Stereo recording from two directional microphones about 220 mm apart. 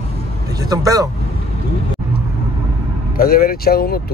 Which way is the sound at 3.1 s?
40° left (ahead or behind).